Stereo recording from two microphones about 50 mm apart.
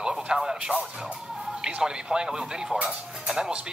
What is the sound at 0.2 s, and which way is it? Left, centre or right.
Speech, centre.